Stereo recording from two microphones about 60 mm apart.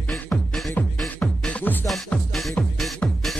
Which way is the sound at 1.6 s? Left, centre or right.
Left.